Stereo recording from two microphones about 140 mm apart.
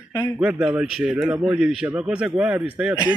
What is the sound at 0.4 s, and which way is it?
Speech, 5° right (ahead or behind).